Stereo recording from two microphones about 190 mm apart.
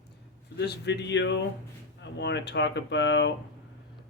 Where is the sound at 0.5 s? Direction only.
60° left (ahead or behind).